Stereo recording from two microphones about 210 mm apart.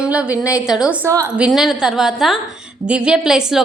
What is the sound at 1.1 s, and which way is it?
Speech, 15° right (ahead or behind).